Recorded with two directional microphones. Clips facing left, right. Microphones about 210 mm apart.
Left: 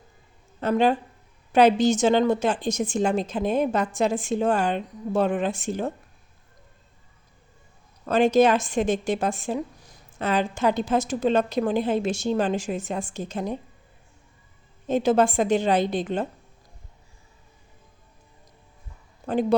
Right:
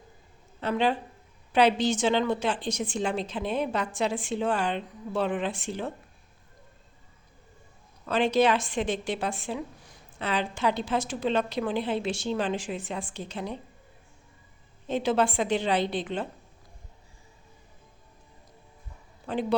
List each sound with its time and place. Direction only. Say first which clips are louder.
0.6 s a woman's voice: left 5 dB; 45° left (ahead or behind)
8.0 s a woman's voice: left 5 dB; 45° left (ahead or behind)
14.8 s a woman's voice: left 5 dB; 45° left (ahead or behind)
19.2 s a woman's voice: left 6 dB; 45° left (ahead or behind)